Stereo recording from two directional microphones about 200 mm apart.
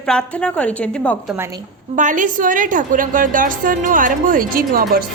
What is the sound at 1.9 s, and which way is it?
A woman's voice, 40° right (ahead or behind).